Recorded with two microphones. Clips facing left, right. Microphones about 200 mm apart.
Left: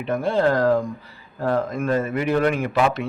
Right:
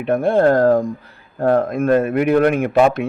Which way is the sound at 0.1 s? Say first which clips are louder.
Right 6 dB; 55° right (ahead or behind).